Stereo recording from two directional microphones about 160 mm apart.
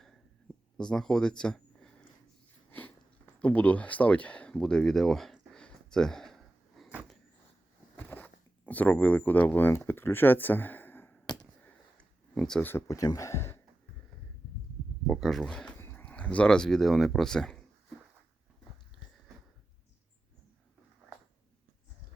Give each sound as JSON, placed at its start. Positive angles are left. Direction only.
{"t": 0.8, "sound": "speech", "side_deg": 5}
{"t": 2.6, "sound": "a sound", "side_deg": 10}
{"t": 12.7, "sound": "speech", "side_deg": 20}
{"t": 15.0, "sound": "speech", "side_deg": 0}